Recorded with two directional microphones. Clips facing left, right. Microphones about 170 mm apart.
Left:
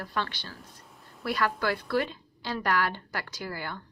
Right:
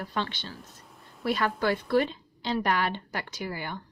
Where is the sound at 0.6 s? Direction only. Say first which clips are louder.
Right 1 dB; centre (ahead or behind).